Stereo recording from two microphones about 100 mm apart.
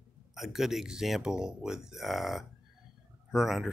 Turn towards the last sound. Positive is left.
turn(degrees=-5)  # may be behind; listen again after turning